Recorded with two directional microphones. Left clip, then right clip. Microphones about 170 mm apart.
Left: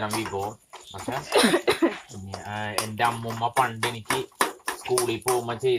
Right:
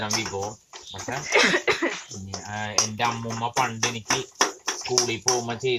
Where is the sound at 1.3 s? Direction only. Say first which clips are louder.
Right 1 dB; 35° left (ahead or behind).